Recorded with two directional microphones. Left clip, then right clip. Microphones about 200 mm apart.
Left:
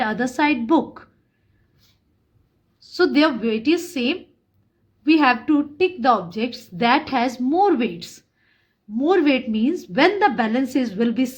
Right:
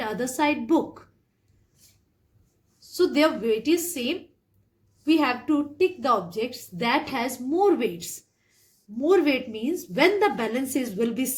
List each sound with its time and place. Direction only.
0.0 s a woman's voice: 45° left (ahead or behind)
2.9 s a woman's voice: 50° left (ahead or behind)